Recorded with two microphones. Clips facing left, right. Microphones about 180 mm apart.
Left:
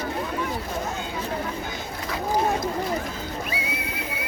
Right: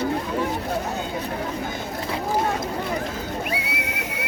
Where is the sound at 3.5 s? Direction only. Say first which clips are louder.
Right 2 dB; 75° right (ahead or behind).